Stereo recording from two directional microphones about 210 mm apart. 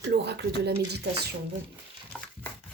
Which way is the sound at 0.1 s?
50° right (ahead or behind).